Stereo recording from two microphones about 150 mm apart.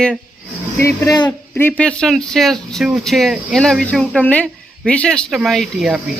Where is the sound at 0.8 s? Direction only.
20° left (ahead or behind).